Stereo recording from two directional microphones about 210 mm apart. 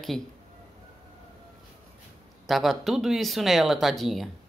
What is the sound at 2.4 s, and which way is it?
Speech, centre (ahead or behind).